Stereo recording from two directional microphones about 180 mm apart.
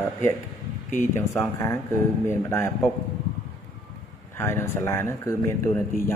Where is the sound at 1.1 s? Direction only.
15° left (ahead or behind).